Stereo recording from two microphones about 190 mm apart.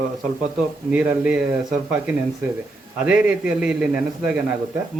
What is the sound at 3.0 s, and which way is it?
A man's voice, 5° right (ahead or behind).